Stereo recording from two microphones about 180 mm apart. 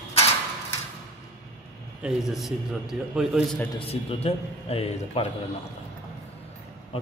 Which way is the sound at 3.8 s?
30° left (ahead or behind).